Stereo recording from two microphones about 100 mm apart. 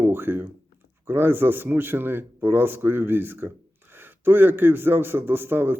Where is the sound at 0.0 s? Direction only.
20° right (ahead or behind).